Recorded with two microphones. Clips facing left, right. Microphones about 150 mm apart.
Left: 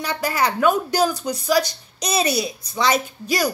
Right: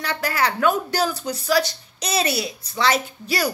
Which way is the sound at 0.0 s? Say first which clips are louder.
Left 1 dB; 15° left (ahead or behind).